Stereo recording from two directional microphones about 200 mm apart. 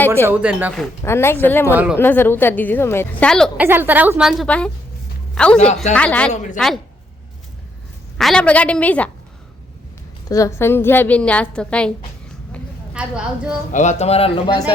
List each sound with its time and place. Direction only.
0.3 s a woman's voice: 10° right (ahead or behind)
0.7 s a woman's voice: 10° left (ahead or behind)
1.7 s a woman's voice: 5° right (ahead or behind)
2.0 s a woman's voice: 10° left (ahead or behind)
3.6 s a woman's voice: 10° right (ahead or behind); by 6.3 s 5° left (ahead or behind)
8.2 s a woman's voice: 5° left (ahead or behind)
10.2 s a woman's voice: 15° left (ahead or behind); by 13.6 s 5° right (ahead or behind)
13.7 s speech: 35° left (ahead or behind)